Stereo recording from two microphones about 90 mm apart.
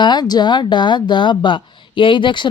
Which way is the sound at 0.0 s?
55° left (ahead or behind).